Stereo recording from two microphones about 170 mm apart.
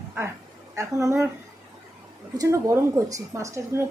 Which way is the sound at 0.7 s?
15° right (ahead or behind).